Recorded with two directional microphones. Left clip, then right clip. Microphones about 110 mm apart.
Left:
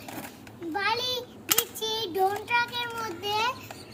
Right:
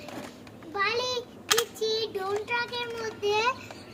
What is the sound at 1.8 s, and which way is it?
Child singing, 30° right (ahead or behind).